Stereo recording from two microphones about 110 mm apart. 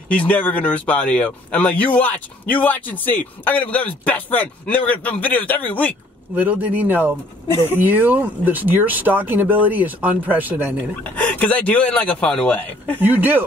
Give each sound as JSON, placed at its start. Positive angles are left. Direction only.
{"t": 0.1, "sound": "speech", "side_deg": 15}
{"t": 6.3, "sound": "speech", "side_deg": -15}
{"t": 11.1, "sound": "speech", "side_deg": 15}
{"t": 13.0, "sound": "speech", "side_deg": -15}